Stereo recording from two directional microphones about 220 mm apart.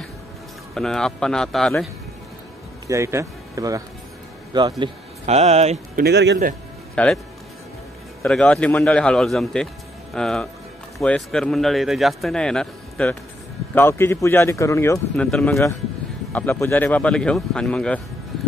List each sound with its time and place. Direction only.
0.7 s speech: centre (ahead or behind)
2.9 s speech: 10° right (ahead or behind); by 6.0 s 30° right (ahead or behind)
6.0 s a man's voice: 50° right (ahead or behind)
7.0 s speech: 5° left (ahead or behind)
8.2 s speech: 5° left (ahead or behind)